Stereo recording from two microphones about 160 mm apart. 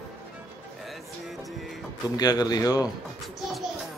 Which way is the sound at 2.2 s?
25° left (ahead or behind).